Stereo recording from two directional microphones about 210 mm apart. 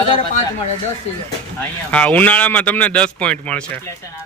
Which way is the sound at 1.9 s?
5° left (ahead or behind).